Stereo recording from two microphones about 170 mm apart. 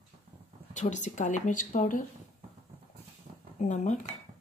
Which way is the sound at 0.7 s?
45° left (ahead or behind).